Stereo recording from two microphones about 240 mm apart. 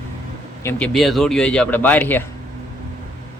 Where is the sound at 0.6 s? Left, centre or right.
Centre.